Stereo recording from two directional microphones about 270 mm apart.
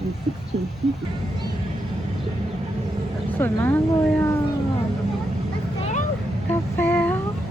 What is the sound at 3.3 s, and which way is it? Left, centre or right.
Speech, centre.